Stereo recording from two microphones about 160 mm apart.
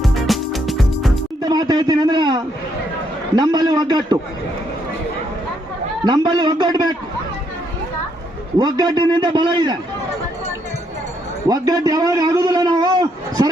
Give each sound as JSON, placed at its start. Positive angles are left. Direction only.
{"t": 0.0, "sound": "music", "side_deg": 0}
{"t": 1.4, "sound": "a man's voice", "side_deg": -25}
{"t": 6.1, "sound": "a man's voice", "side_deg": -30}
{"t": 8.5, "sound": "a man's voice", "side_deg": -25}
{"t": 11.4, "sound": "a man's voice", "side_deg": -25}